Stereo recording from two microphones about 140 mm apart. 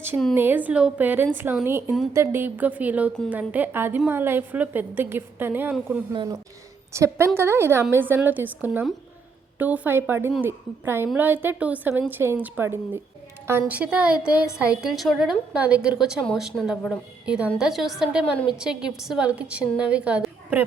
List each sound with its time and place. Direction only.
0.3 s a woman's voice: 15° right (ahead or behind)
6.1 s a woman's voice: 25° right (ahead or behind); by 17.0 s 5° left (ahead or behind)
17.2 s a woman's voice: 5° right (ahead or behind)